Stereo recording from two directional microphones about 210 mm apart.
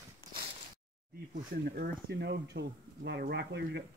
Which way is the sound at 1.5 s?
45° right (ahead or behind).